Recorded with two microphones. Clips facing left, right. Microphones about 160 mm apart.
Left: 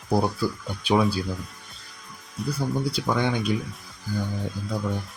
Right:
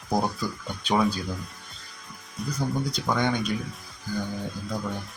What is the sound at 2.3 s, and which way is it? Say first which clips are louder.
Speech: left 1 dB; 5° left (ahead or behind).